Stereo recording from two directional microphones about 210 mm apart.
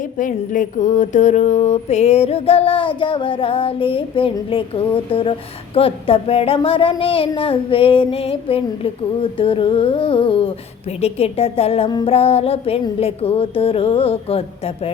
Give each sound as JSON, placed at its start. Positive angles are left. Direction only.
{"t": 0.2, "sound": "mantra", "side_deg": 40}